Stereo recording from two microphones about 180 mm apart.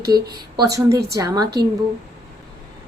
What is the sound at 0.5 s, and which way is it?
Speech, 20° right (ahead or behind).